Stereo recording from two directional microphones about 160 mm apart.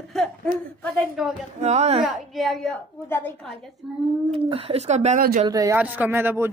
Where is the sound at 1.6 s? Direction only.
45° right (ahead or behind).